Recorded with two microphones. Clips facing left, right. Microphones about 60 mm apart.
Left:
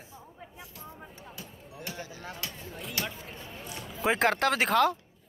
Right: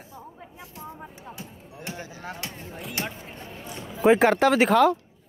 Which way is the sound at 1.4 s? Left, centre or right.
Right.